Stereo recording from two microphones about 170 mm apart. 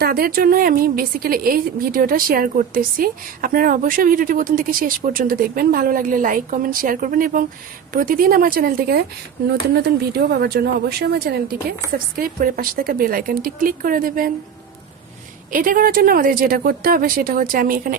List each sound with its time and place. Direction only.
0.0 s a woman's voice: 65° right (ahead or behind)
15.5 s a woman's voice: 55° right (ahead or behind)